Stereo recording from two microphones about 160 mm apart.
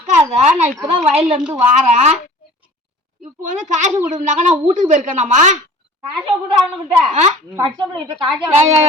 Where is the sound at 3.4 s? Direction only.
50° right (ahead or behind).